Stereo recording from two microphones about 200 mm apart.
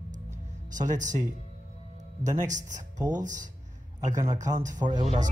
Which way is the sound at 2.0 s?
40° right (ahead or behind).